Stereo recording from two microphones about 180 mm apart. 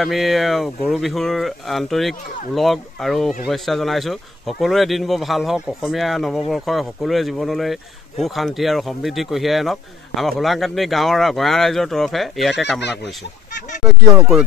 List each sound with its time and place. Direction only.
0.0 s speech: centre (ahead or behind)
13.0 s speech: 65° left (ahead or behind)